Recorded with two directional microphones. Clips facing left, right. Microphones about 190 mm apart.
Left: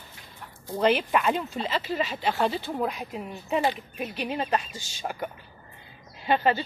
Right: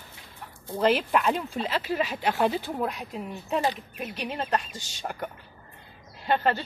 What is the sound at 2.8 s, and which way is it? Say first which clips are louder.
Speech: left 1 dB; centre (ahead or behind).